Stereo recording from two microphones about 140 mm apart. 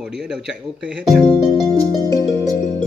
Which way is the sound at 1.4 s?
25° right (ahead or behind).